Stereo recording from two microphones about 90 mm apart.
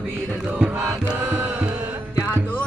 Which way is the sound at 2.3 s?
20° left (ahead or behind).